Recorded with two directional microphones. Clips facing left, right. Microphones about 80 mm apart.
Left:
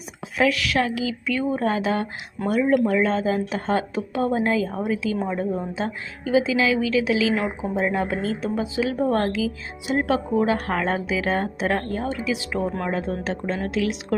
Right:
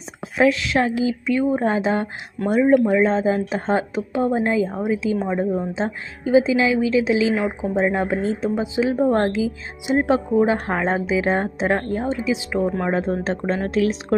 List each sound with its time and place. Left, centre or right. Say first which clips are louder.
0.3 s a woman's voice: right 3 dB; right
12.8 s speech: right 4 dB; right